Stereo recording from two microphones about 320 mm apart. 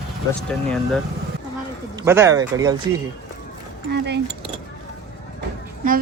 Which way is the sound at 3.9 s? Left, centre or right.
Right.